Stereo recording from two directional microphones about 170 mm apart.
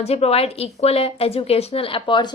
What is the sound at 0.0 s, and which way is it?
A woman's voice, 35° left (ahead or behind).